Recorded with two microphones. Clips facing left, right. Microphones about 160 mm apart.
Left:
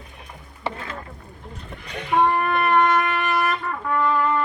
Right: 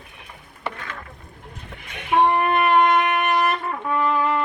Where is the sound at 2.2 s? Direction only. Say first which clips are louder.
Right 2 dB; 20° right (ahead or behind).